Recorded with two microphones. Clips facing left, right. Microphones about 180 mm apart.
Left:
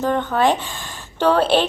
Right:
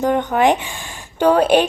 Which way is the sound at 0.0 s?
15° right (ahead or behind).